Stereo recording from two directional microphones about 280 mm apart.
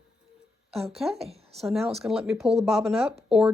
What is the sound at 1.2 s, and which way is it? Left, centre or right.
Speech, right.